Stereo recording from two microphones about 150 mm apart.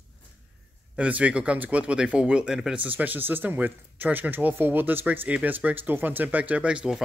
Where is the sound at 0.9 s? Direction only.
10° right (ahead or behind).